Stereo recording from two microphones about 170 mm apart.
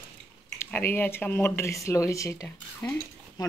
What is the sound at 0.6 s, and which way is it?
Speech, 10° left (ahead or behind).